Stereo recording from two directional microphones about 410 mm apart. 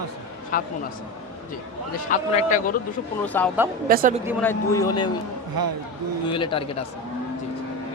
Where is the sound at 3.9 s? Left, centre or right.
Right.